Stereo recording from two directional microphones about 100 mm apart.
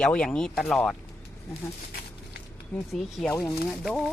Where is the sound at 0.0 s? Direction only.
10° left (ahead or behind).